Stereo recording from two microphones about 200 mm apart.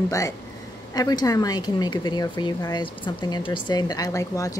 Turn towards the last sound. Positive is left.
turn(degrees=15)  # may be behind; listen again after turning